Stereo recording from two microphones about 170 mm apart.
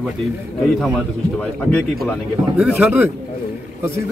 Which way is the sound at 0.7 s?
5° left (ahead or behind).